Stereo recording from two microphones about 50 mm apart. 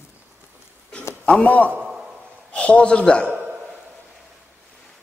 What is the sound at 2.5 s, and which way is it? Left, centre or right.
Speech, left.